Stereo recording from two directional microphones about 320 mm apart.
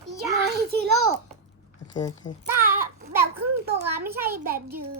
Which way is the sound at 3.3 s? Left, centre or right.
Right.